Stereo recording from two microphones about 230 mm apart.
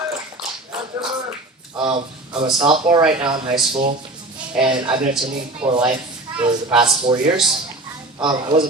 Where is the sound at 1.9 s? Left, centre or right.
Right.